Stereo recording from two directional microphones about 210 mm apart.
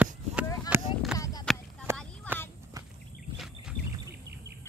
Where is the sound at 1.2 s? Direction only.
20° left (ahead or behind).